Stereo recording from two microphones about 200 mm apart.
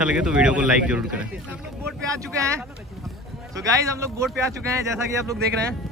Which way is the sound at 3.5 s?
15° right (ahead or behind).